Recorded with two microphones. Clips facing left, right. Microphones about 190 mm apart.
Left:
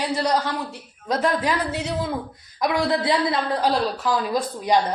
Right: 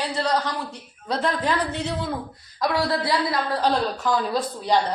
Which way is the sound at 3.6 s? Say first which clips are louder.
Left 1 dB; 5° left (ahead or behind).